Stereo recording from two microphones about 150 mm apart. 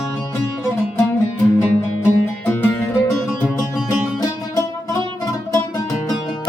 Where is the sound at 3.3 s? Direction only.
Centre (ahead or behind).